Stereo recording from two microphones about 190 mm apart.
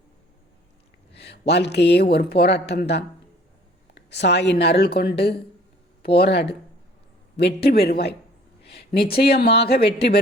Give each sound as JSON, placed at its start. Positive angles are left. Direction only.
{"t": 1.1, "sound": "a woman's voice", "side_deg": 60}